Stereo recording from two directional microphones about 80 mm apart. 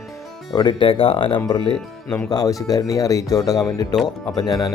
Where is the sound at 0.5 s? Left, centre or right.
Left.